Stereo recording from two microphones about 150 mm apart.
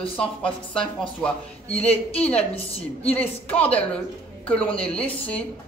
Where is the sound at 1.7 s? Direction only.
45° left (ahead or behind).